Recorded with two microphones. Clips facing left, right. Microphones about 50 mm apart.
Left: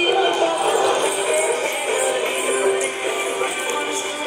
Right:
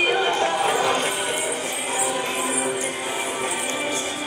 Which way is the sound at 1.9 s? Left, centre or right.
Left.